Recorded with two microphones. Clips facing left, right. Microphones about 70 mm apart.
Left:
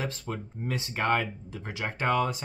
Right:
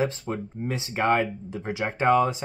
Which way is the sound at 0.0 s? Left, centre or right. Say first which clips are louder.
Right 7 dB; centre.